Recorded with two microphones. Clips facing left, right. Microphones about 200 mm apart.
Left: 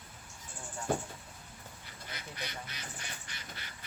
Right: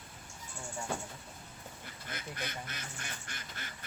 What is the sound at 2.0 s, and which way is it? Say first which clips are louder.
Speech: right 2 dB; 50° right (ahead or behind).